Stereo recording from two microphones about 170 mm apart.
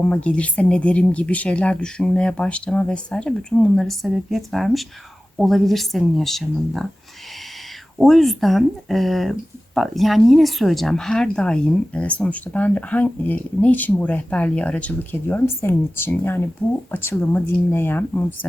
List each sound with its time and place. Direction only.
0.0 s speech: 5° left (ahead or behind)
7.9 s speech: centre (ahead or behind)